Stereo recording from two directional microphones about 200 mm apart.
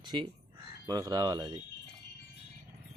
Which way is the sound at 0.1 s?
25° right (ahead or behind).